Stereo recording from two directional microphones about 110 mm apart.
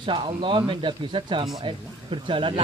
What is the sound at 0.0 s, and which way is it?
Speech, 50° right (ahead or behind).